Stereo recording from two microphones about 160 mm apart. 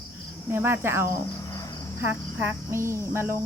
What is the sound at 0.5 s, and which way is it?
Speech, 15° right (ahead or behind).